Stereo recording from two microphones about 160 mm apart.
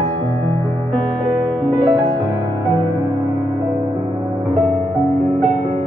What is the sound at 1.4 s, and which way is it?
Music, 20° right (ahead or behind).